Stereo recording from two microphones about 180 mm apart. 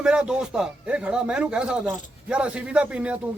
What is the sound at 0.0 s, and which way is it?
Speech, 5° right (ahead or behind).